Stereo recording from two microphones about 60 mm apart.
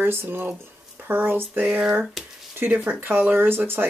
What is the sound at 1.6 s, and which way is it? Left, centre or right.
Speech, centre.